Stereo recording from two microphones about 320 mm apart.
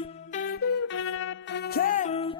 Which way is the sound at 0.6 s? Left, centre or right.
Left.